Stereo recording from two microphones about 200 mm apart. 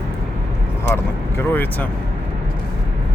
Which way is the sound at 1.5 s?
10° left (ahead or behind).